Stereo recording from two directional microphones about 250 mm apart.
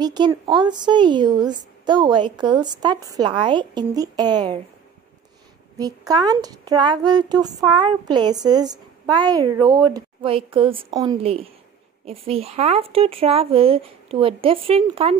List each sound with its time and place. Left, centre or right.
0.0 s a woman's voice: centre
5.8 s a woman's voice: centre